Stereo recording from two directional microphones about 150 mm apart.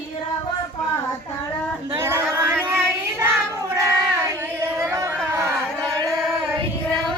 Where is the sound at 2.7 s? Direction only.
15° right (ahead or behind).